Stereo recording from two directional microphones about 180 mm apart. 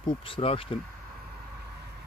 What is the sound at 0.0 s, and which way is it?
Speech, 30° left (ahead or behind).